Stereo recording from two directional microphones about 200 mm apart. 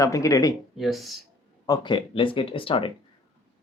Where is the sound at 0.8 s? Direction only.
Centre (ahead or behind).